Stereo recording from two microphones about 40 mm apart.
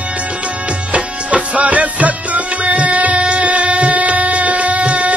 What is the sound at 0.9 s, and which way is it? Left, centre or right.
Music, right.